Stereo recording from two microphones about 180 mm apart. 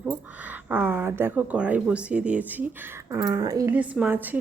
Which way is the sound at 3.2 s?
20° right (ahead or behind).